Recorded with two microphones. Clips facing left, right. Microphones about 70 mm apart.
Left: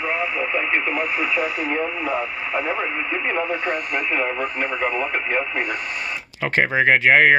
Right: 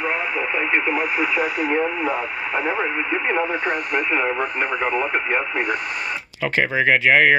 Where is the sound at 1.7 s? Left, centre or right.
Right.